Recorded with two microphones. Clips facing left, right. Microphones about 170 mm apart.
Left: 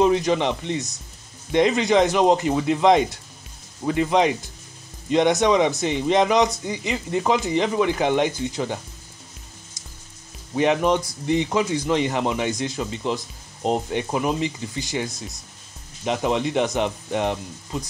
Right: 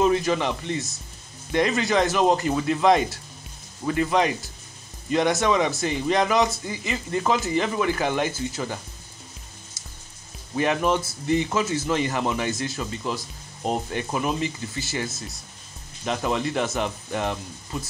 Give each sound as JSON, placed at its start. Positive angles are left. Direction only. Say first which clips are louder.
{"t": 0.0, "sound": "speech", "louder": "left 2 dB", "side_deg": 20}
{"t": 10.5, "sound": "speech", "louder": "left 3 dB", "side_deg": 20}